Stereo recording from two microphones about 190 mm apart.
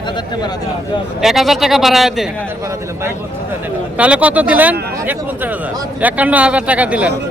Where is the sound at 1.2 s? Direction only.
Centre (ahead or behind).